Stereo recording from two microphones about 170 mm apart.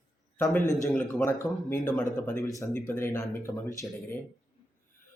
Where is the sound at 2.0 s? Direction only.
50° left (ahead or behind).